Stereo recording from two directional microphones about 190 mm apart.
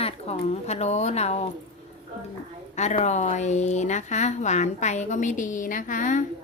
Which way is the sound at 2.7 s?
35° left (ahead or behind).